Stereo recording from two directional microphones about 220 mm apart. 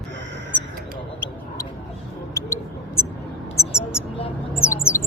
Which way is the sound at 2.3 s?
15° left (ahead or behind).